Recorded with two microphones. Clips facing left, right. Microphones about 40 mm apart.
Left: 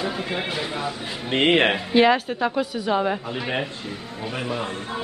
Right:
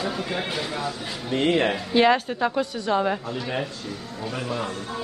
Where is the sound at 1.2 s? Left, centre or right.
Left.